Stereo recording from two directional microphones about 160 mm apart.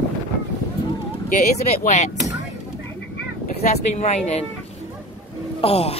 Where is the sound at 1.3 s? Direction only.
55° left (ahead or behind).